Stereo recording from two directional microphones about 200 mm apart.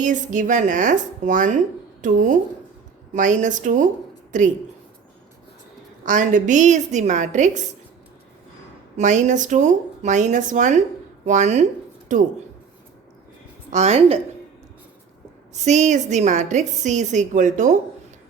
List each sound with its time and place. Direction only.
0.0 s speech: 40° right (ahead or behind)
6.1 s speech: 40° right (ahead or behind)
9.0 s speech: 35° right (ahead or behind)
13.7 s speech: 35° right (ahead or behind)
15.5 s speech: 35° right (ahead or behind)